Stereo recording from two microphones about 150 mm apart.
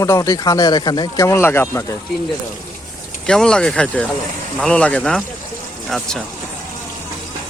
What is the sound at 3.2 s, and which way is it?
Speech, 5° left (ahead or behind).